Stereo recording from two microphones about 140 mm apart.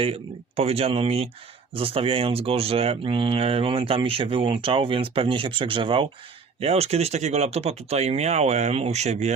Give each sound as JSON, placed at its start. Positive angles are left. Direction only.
{"t": 0.0, "sound": "speech", "side_deg": -45}